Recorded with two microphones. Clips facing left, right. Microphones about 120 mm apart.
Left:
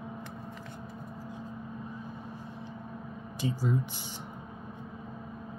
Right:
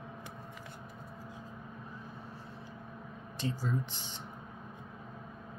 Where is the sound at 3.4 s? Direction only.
10° left (ahead or behind).